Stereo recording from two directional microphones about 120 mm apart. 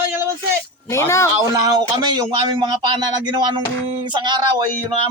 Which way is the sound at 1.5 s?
40° right (ahead or behind).